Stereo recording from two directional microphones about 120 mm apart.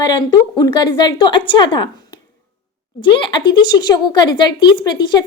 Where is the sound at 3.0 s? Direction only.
45° left (ahead or behind).